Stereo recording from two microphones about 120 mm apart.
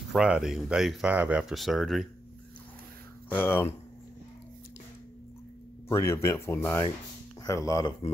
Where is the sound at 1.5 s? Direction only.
Centre (ahead or behind).